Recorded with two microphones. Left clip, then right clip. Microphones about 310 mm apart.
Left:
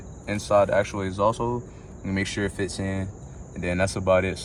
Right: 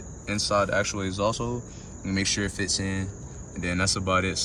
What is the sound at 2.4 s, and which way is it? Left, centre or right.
Speech, centre.